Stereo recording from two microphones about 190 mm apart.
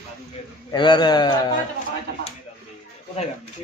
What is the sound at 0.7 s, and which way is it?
Speech, 25° left (ahead or behind).